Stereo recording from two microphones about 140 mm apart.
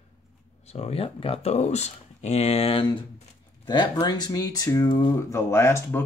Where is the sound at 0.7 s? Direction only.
50° left (ahead or behind).